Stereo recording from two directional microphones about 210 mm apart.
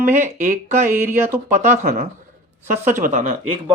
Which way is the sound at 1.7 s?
45° right (ahead or behind).